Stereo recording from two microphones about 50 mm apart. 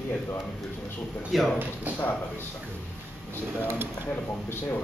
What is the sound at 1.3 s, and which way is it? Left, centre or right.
Speech, centre.